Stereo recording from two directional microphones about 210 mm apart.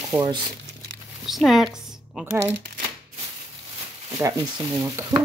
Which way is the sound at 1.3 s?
Centre (ahead or behind).